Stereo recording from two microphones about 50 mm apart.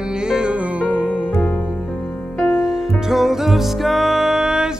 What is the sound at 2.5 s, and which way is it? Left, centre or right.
Music, centre.